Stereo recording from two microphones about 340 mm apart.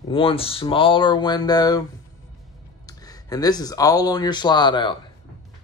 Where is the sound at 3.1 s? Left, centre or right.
Centre.